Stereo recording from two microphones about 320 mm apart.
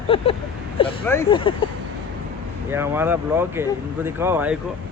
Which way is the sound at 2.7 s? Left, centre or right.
Centre.